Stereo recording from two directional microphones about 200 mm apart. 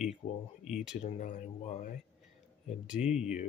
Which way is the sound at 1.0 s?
35° left (ahead or behind).